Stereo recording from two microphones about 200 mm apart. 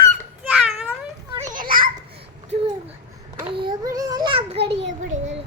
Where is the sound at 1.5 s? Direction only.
45° right (ahead or behind).